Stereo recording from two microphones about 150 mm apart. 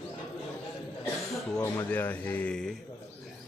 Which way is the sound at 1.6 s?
15° left (ahead or behind).